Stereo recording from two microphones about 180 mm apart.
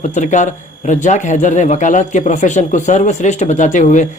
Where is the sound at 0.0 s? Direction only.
40° left (ahead or behind).